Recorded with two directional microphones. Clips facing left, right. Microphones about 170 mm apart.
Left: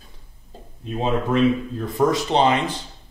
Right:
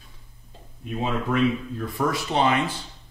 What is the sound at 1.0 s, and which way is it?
Speech, 30° left (ahead or behind).